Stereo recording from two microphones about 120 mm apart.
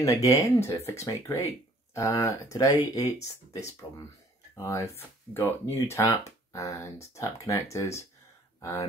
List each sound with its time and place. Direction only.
0.0 s speech: 25° left (ahead or behind)